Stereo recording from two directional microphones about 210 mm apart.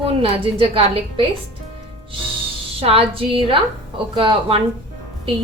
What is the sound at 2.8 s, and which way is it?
A woman's voice, 25° right (ahead or behind).